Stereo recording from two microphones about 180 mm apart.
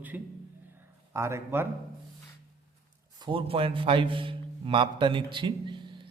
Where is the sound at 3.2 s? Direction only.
25° right (ahead or behind).